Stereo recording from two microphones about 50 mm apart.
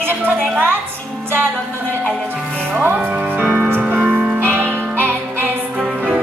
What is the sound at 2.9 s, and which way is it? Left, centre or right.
Music, right.